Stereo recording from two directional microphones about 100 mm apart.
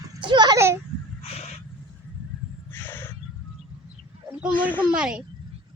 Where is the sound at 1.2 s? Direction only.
90° left.